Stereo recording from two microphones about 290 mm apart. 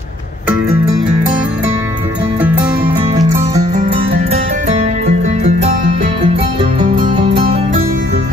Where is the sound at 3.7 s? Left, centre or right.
Right.